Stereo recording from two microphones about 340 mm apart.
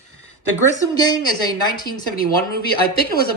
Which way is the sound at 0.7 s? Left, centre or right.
Centre.